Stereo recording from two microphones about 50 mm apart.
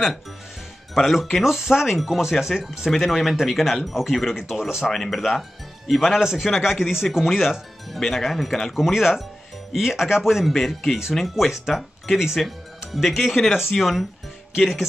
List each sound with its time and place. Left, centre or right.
0.9 s speech: centre
4.8 s speech: centre
8.0 s speech: centre
8.7 s speech: centre